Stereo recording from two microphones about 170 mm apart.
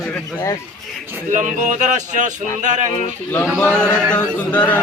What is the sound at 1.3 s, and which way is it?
Music, 45° right (ahead or behind).